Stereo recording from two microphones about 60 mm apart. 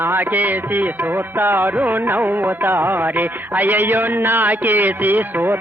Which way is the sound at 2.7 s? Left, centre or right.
Right.